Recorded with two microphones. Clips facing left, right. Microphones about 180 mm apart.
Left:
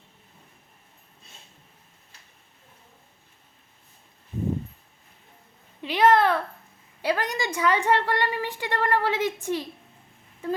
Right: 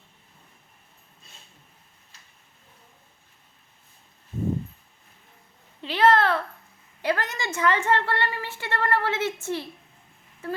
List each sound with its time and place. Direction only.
5.8 s a woman's voice: 15° left (ahead or behind)